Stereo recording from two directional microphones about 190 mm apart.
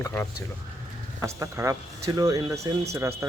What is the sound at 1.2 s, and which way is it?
Speech, 15° right (ahead or behind).